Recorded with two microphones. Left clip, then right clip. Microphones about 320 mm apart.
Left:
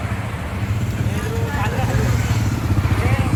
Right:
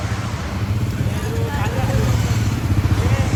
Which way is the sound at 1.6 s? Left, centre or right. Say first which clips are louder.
Even; centre.